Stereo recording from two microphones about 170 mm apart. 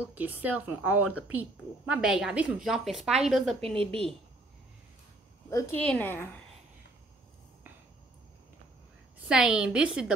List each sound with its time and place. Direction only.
0.0 s speech: 10° right (ahead or behind)
3.6 s a woman's voice: 35° right (ahead or behind)
5.5 s speech: 15° left (ahead or behind)
9.3 s a woman's voice: 5° right (ahead or behind)